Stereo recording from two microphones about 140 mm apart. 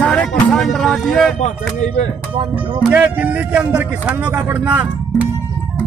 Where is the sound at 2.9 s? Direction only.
10° right (ahead or behind).